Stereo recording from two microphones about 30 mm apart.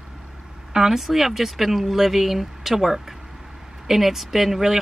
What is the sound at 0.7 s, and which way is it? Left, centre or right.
A woman's voice, centre.